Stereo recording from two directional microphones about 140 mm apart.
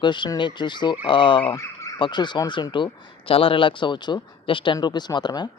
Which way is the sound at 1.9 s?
35° left (ahead or behind).